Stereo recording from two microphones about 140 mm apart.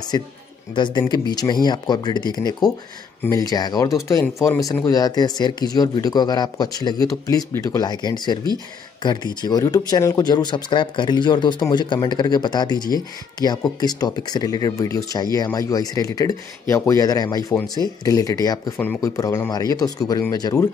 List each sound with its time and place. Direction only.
0.1 s speech: 25° left (ahead or behind)